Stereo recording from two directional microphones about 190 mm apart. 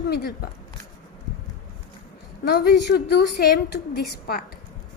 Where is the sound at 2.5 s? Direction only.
60° left (ahead or behind).